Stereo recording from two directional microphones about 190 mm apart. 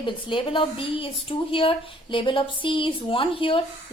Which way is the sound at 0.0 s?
25° left (ahead or behind).